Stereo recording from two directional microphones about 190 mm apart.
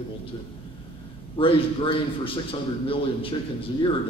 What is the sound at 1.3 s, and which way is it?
A man's voice, 25° left (ahead or behind).